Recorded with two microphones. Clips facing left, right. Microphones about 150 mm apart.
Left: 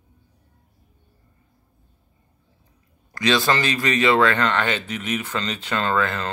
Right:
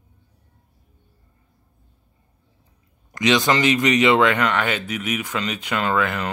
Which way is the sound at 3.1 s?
20° right (ahead or behind).